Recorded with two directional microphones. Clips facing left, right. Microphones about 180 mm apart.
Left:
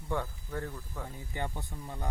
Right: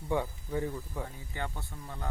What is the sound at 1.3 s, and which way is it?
Speech, 15° left (ahead or behind).